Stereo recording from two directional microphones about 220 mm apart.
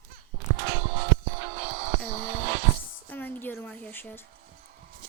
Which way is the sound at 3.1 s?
10° left (ahead or behind).